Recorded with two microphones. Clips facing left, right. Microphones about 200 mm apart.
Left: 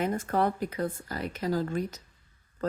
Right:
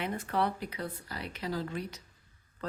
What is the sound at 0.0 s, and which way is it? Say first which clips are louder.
Speech: left 5 dB; 45° left (ahead or behind).